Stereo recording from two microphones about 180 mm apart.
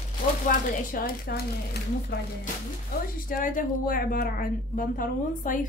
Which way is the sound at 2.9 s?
55° left (ahead or behind).